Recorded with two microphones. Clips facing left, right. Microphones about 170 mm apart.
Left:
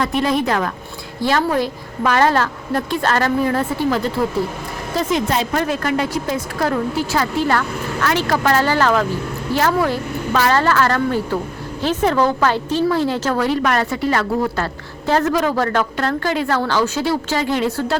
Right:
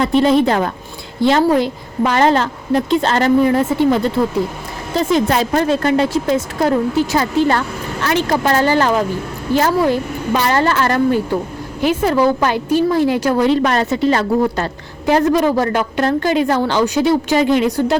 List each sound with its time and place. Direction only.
0.0 s a woman's voice: 25° right (ahead or behind)
5.1 s a woman's voice: 30° right (ahead or behind)